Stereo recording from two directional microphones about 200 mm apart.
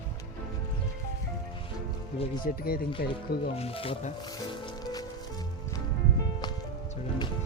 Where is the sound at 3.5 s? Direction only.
30° left (ahead or behind).